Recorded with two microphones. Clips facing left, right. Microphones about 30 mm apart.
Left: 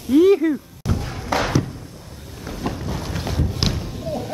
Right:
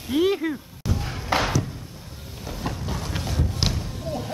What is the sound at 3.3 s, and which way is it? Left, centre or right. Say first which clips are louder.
Thump: left 4 dB; centre.